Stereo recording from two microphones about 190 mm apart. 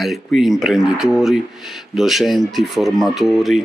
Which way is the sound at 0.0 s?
Centre (ahead or behind).